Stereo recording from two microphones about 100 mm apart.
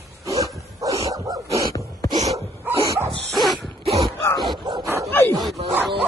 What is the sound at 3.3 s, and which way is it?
Dog, centre (ahead or behind).